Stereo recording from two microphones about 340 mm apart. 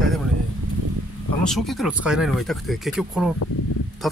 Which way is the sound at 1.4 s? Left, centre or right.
Centre.